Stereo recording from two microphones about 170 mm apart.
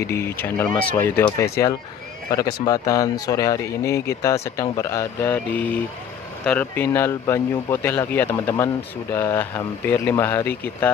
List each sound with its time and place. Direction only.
0.0 s a man's voice: 15° left (ahead or behind)